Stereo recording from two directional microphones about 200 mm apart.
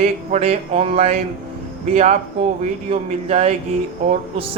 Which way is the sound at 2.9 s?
35° right (ahead or behind).